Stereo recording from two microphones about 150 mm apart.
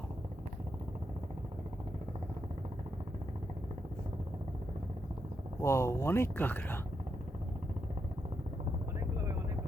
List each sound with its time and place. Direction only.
5.5 s speech: 20° left (ahead or behind)
9.0 s vehicle: 20° right (ahead or behind)